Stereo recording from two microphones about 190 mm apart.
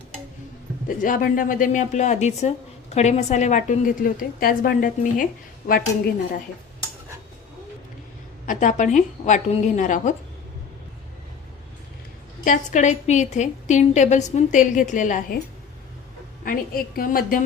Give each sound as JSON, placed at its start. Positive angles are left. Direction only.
{"t": 0.9, "sound": "a woman's voice", "side_deg": 45}
{"t": 8.4, "sound": "a woman's voice", "side_deg": 40}
{"t": 12.5, "sound": "a woman's voice", "side_deg": 40}
{"t": 16.4, "sound": "a woman's voice", "side_deg": 50}